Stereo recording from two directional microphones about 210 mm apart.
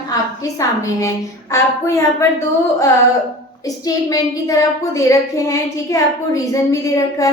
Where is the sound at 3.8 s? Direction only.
15° left (ahead or behind).